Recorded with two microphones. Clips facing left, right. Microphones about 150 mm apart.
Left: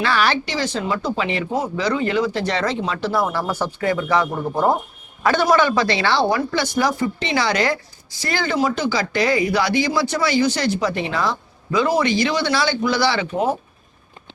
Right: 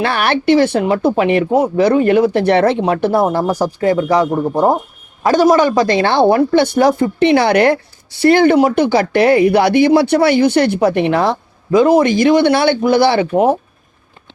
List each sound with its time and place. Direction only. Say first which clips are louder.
0.0 s speech: right 5 dB; 55° right (ahead or behind)
3.2 s speech: right 8 dB; 40° right (ahead or behind)
4.4 s speech: right 6 dB; 25° right (ahead or behind)
5.2 s speech: right 6 dB; 40° right (ahead or behind); by 13.6 s 55° right (ahead or behind)